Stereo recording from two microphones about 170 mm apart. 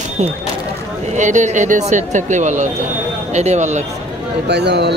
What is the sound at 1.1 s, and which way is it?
Speech, 45° right (ahead or behind).